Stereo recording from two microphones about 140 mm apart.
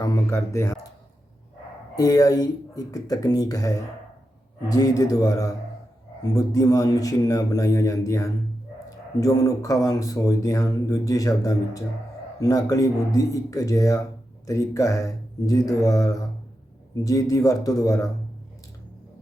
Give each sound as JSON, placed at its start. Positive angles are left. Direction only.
{"t": 0.0, "sound": "speech", "side_deg": 20}
{"t": 2.0, "sound": "speech", "side_deg": 25}